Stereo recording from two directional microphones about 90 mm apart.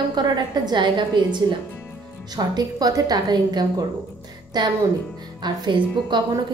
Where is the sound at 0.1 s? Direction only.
50° right (ahead or behind).